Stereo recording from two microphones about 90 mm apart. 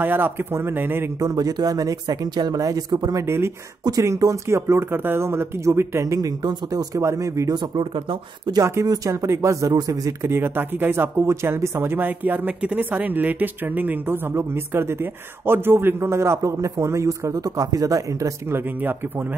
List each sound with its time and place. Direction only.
0.0 s speech: 20° right (ahead or behind)
1.2 s speech: 40° right (ahead or behind)
7.5 s speech: 60° right (ahead or behind)
8.8 s speech: 40° right (ahead or behind)
10.3 s speech: 25° right (ahead or behind); by 18.3 s 40° right (ahead or behind)
18.5 s speech: 20° right (ahead or behind)